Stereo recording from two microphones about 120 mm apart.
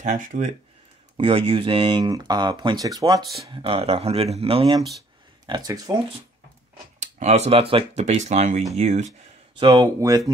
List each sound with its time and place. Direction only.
0.0 s speech: 90° right
1.1 s speech: 50° right (ahead or behind); by 3.2 s 30° right (ahead or behind)
3.2 s speech: centre (ahead or behind)
3.4 s speech: 50° right (ahead or behind)
5.5 s speech: 35° right (ahead or behind)
7.0 s speech: 70° right (ahead or behind); by 8.0 s 50° right (ahead or behind)
8.0 s speech: 80° right
9.6 s speech: 40° right (ahead or behind)